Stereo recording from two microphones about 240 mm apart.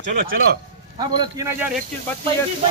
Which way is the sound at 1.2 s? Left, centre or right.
Centre.